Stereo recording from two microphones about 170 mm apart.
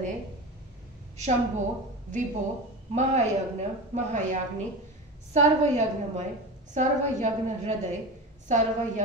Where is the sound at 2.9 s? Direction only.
45° right (ahead or behind).